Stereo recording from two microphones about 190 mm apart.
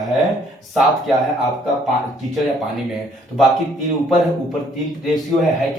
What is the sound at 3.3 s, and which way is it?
Speech, centre (ahead or behind).